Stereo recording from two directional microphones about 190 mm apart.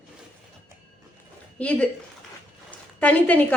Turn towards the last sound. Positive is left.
turn(degrees=5)  # may be behind; listen again after turning